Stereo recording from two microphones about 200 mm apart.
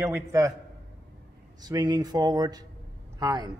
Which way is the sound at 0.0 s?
15° right (ahead or behind).